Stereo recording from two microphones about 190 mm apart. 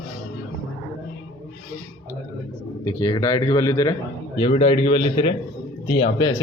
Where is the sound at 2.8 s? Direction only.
20° left (ahead or behind).